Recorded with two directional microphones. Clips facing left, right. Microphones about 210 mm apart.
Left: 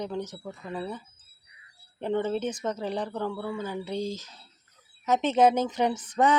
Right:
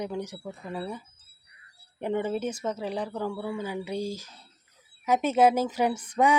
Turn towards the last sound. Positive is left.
turn(degrees=-10)  # may be behind; listen again after turning